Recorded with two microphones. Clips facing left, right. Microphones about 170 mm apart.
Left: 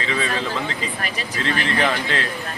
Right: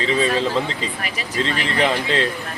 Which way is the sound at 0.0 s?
30° right (ahead or behind).